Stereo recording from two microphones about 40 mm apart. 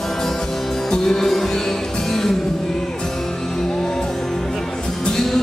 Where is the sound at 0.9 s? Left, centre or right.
Centre.